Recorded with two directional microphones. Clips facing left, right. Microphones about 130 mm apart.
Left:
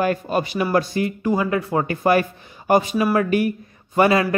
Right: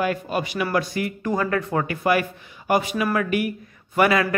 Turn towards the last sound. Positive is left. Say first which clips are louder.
# left 2 dB
turn(degrees=25)  # may be behind; listen again after turning